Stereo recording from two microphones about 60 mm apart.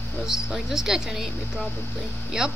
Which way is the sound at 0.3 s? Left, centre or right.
Centre.